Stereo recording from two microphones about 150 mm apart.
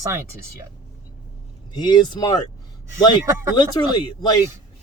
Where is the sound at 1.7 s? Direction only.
30° left (ahead or behind).